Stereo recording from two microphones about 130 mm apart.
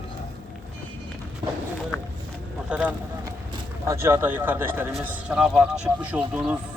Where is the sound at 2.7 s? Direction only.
10° right (ahead or behind).